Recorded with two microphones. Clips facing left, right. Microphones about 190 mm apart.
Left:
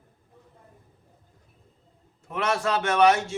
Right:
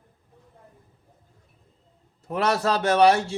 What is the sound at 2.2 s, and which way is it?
Speech, 35° right (ahead or behind).